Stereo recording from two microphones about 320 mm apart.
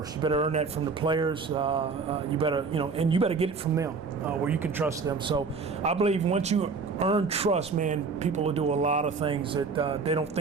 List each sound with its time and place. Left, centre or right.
0.2 s speech: centre
4.4 s a man's voice: centre